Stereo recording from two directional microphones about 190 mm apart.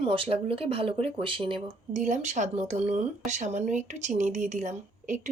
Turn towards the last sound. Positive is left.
turn(degrees=-40)  # may be behind; listen again after turning